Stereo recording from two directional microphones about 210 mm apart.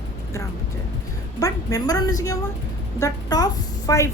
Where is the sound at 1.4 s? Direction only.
15° left (ahead or behind).